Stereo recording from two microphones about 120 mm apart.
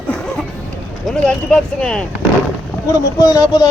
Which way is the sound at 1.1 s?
10° left (ahead or behind).